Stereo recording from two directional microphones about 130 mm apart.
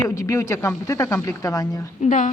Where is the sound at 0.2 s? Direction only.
20° left (ahead or behind).